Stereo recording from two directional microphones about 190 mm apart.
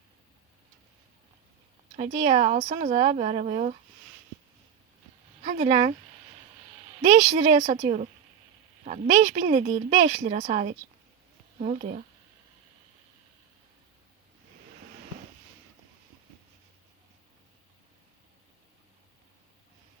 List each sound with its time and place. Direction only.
2.0 s speech: 35° right (ahead or behind)
5.4 s speech: 35° right (ahead or behind)
7.0 s speech: 35° right (ahead or behind)